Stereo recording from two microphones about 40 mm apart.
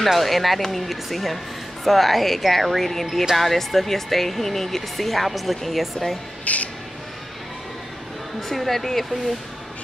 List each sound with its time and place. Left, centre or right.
0.0 s speech: centre
6.4 s insect: left
8.4 s speech: centre